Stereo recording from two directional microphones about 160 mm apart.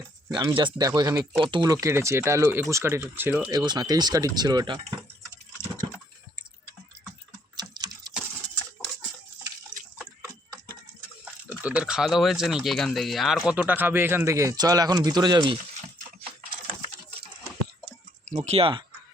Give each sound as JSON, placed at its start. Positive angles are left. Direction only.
{"t": 0.3, "sound": "speech", "side_deg": -30}
{"t": 3.5, "sound": "speech", "side_deg": -25}
{"t": 7.5, "sound": "typing", "side_deg": -25}
{"t": 11.4, "sound": "speech", "side_deg": -10}
{"t": 18.3, "sound": "speech", "side_deg": -45}